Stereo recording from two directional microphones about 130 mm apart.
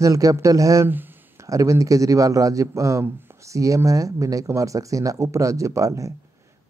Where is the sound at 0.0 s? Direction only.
25° right (ahead or behind).